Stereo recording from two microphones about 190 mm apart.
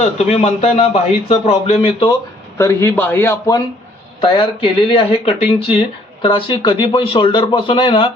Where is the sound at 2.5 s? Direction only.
15° left (ahead or behind).